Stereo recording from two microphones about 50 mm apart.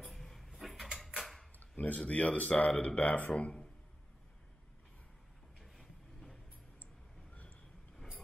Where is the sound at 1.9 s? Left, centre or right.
Left.